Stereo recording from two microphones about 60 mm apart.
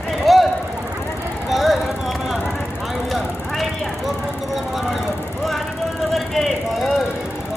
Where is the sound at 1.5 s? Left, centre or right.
Centre.